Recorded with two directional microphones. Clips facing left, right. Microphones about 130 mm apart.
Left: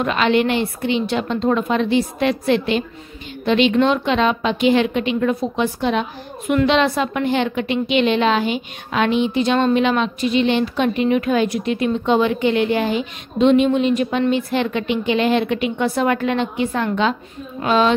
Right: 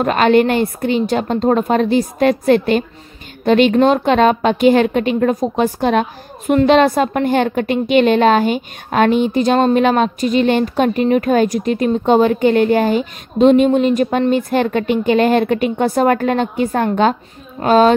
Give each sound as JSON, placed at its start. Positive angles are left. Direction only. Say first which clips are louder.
{"t": 0.0, "sound": "a woman's voice", "louder": "right 5 dB", "side_deg": -45}